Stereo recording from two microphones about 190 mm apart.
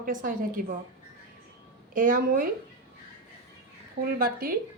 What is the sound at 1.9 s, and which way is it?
Speech, 45° right (ahead or behind).